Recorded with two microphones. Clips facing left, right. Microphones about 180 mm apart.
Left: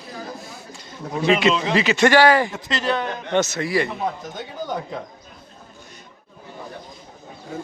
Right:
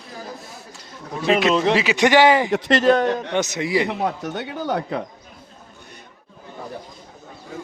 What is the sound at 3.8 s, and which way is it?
Speech, 70° right (ahead or behind).